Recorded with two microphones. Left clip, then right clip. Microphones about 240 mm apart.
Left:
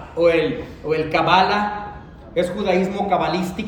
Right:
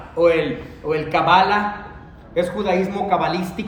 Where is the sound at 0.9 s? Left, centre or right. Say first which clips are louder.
Left 1 dB; centre.